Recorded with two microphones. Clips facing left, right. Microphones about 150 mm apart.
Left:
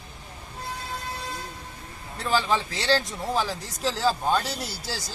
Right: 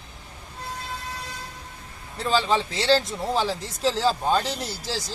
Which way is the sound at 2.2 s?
20° right (ahead or behind).